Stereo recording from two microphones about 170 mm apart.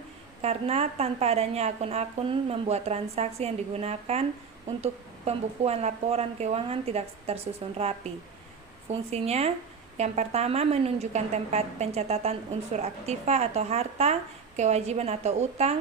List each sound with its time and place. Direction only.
0.4 s a woman's voice: 40° right (ahead or behind)